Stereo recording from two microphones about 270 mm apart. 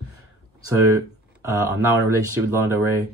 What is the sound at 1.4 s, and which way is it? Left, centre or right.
Speech, centre.